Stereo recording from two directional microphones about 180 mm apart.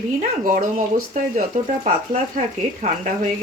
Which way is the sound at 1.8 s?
45° right (ahead or behind).